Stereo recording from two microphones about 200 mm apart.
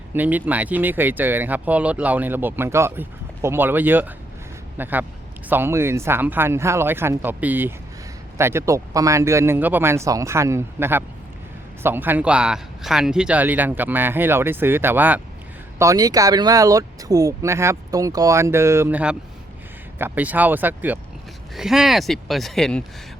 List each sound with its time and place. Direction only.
0.1 s speech: 10° right (ahead or behind)